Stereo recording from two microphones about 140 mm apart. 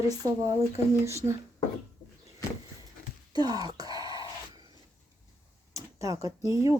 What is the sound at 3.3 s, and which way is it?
Wail, 30° right (ahead or behind).